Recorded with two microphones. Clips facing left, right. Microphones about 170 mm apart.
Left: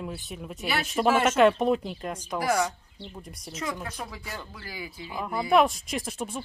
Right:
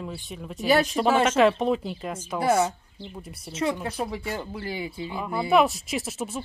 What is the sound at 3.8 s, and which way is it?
Speech, 25° right (ahead or behind).